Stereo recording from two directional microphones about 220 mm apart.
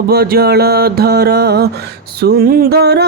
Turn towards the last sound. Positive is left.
turn(degrees=-45)  # may be behind; listen again after turning